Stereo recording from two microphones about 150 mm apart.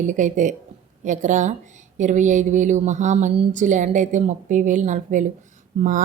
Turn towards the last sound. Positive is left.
turn(degrees=-60)  # may be behind; listen again after turning